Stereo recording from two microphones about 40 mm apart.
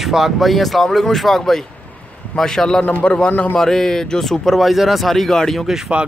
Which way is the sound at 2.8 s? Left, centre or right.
Left.